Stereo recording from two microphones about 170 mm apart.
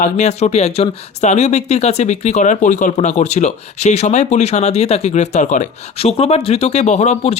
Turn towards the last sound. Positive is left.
turn(degrees=40)  # may be behind; listen again after turning